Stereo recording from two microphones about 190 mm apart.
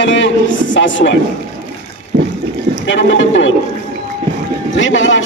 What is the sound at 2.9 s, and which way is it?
Speech, 75° left (ahead or behind).